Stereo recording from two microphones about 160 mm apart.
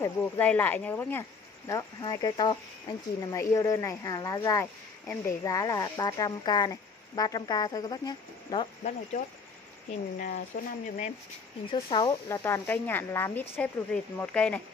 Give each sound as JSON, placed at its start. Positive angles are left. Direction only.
{"t": 0.0, "sound": "speech", "side_deg": 10}
{"t": 1.7, "sound": "speech", "side_deg": 25}
{"t": 10.1, "sound": "speech", "side_deg": 60}
{"t": 11.9, "sound": "speech", "side_deg": 30}
{"t": 12.3, "sound": "speech", "side_deg": 15}